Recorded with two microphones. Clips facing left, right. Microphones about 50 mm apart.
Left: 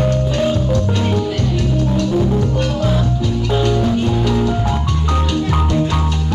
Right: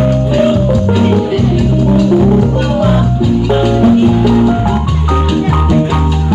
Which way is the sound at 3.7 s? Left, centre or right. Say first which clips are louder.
Right 8 dB; centre.